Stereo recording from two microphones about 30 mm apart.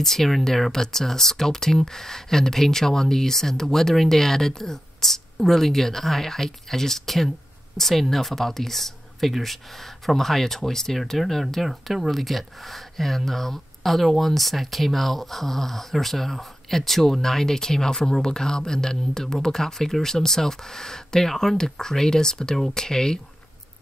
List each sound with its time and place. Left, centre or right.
0.0 s speech: centre
11.6 s speech: centre; by 23.2 s left